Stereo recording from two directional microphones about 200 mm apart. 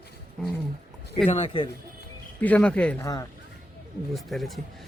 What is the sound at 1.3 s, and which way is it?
Speech, 30° left (ahead or behind).